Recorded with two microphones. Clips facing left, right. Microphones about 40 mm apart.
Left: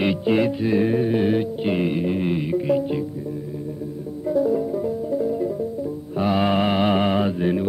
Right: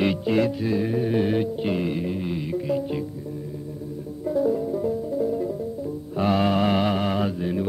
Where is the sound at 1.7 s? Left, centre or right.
Left.